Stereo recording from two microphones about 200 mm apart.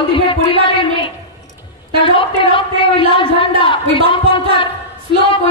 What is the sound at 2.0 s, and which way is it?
A woman's voice, 25° left (ahead or behind).